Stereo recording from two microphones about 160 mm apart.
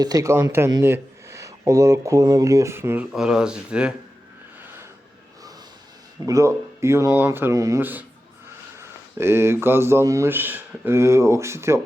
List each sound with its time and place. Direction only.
0.0 s speech: 20° right (ahead or behind)
3.1 s speech: 5° right (ahead or behind)
6.2 s a man's voice: 20° right (ahead or behind)